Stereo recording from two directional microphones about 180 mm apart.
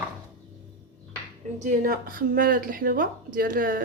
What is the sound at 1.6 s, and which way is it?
Speech, 50° right (ahead or behind).